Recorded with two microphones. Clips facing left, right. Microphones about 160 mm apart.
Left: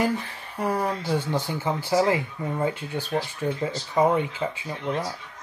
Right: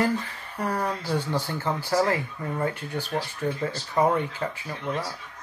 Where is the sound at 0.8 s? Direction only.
25° left (ahead or behind).